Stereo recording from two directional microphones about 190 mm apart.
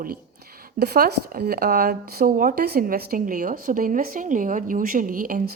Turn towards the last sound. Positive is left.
turn(degrees=-45)  # may be behind; listen again after turning